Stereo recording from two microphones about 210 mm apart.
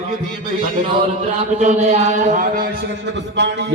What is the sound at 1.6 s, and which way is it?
Speech, 30° right (ahead or behind).